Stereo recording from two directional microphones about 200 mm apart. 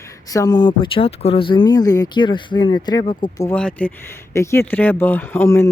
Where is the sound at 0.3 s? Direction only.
15° left (ahead or behind).